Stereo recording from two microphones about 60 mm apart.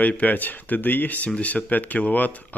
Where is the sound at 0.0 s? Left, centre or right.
Left.